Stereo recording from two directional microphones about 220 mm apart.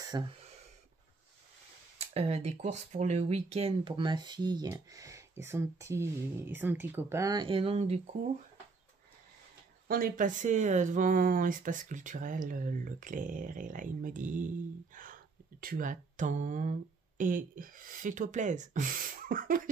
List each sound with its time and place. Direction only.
0.0 s a sound: 20° right (ahead or behind)
2.0 s speech: 30° right (ahead or behind)
9.8 s speech: 40° right (ahead or behind)
15.6 s speech: 40° right (ahead or behind)